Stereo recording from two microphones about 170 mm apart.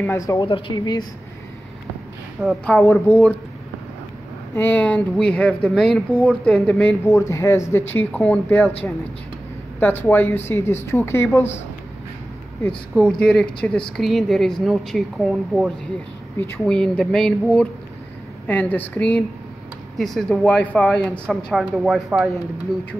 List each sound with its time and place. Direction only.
0.0 s speech: 15° left (ahead or behind)
0.4 s speech: 30° left (ahead or behind)
2.4 s speech: 5° left (ahead or behind)
4.6 s speech: 10° left (ahead or behind)
7.1 s speech: 15° left (ahead or behind)
9.8 s speech: 10° left (ahead or behind)
12.9 s speech: 5° left (ahead or behind)